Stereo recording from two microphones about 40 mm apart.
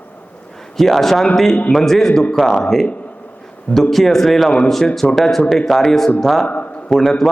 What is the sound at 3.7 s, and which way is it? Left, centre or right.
A man's voice, centre.